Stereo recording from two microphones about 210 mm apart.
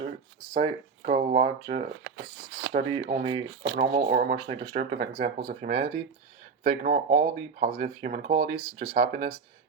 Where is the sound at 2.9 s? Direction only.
30° right (ahead or behind).